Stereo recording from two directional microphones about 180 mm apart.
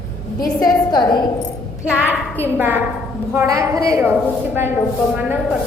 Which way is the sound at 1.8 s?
10° right (ahead or behind).